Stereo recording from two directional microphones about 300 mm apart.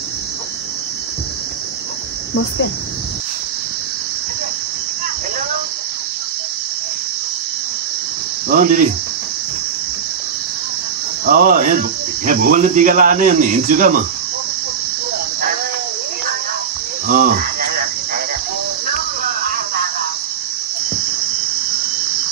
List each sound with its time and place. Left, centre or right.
8.5 s speech: right
11.2 s speech: right
17.1 s speech: right